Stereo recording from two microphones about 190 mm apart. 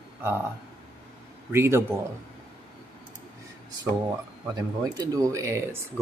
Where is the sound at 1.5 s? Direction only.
15° right (ahead or behind).